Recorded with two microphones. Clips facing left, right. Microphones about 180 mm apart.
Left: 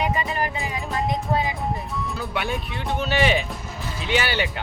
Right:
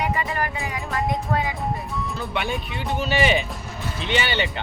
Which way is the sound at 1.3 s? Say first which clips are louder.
Left 1 dB; 20° left (ahead or behind).